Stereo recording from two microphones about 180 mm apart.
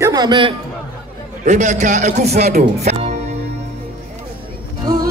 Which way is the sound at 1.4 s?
40° right (ahead or behind).